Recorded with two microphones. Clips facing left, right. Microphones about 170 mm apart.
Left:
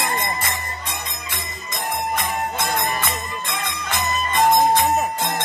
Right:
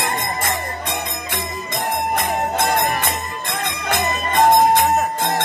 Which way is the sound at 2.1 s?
60° right (ahead or behind).